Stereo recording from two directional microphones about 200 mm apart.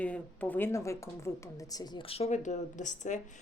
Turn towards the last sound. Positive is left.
turn(degrees=40)  # may be behind; listen again after turning